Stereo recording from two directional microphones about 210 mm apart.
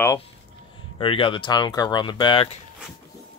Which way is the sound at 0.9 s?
25° left (ahead or behind).